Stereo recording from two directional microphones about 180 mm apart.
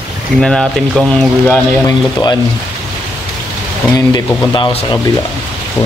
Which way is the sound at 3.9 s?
25° left (ahead or behind).